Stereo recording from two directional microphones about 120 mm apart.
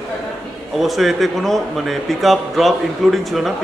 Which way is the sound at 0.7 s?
Centre (ahead or behind).